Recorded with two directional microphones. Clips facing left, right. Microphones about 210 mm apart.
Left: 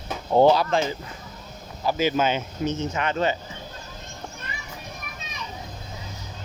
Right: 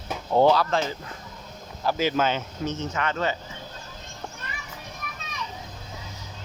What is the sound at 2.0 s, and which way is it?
Speech, 10° left (ahead or behind).